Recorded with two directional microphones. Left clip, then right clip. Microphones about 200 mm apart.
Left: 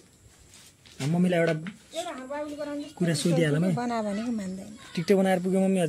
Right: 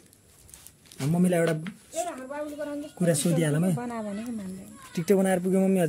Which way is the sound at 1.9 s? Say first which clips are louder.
Right 1 dB; 15° left (ahead or behind).